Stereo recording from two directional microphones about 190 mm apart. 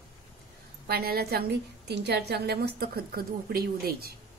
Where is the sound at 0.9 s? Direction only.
55° right (ahead or behind).